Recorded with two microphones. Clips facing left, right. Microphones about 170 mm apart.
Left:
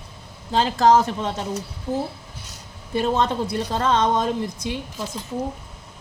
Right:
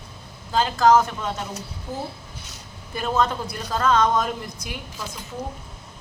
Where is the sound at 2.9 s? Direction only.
30° left (ahead or behind).